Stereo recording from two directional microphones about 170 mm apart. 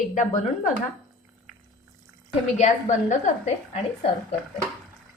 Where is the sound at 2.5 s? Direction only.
45° left (ahead or behind).